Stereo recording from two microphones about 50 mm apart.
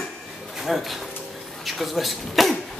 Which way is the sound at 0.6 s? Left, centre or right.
Centre.